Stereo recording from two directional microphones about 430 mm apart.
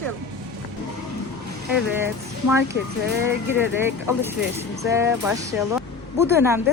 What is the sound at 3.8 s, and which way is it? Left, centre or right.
Speech, centre.